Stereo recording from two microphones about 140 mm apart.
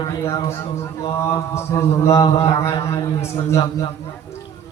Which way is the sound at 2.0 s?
20° left (ahead or behind).